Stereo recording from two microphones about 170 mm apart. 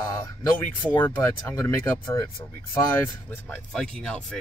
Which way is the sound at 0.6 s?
10° left (ahead or behind).